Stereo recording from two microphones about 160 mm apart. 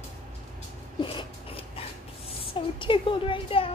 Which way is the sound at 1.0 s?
35° left (ahead or behind).